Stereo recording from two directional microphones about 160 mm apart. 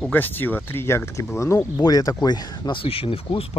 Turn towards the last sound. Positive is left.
turn(degrees=35)  # may be behind; listen again after turning